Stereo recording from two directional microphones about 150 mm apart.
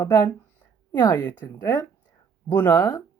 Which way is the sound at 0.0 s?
20° left (ahead or behind).